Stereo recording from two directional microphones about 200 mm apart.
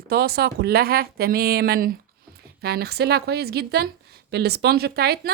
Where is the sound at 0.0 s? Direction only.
50° right (ahead or behind).